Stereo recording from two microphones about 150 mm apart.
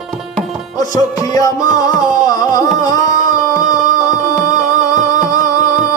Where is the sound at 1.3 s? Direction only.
25° left (ahead or behind).